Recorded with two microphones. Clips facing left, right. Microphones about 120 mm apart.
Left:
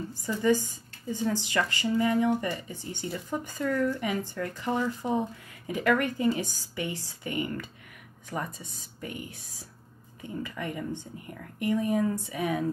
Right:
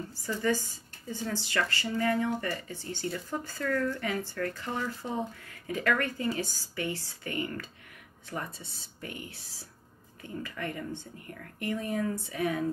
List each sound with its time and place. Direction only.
0.1 s speech: 15° left (ahead or behind)
10.2 s speech: 15° left (ahead or behind)